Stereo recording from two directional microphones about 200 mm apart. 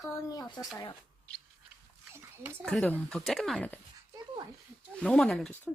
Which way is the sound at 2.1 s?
10° right (ahead or behind).